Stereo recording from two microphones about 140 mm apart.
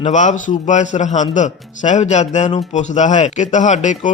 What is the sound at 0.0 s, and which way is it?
A man's voice, 60° left (ahead or behind).